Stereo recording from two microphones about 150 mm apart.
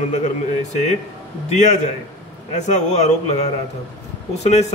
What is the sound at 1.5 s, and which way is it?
Speech, 50° left (ahead or behind).